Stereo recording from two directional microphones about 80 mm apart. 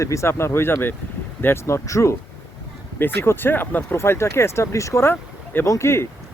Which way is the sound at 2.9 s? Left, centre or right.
Left.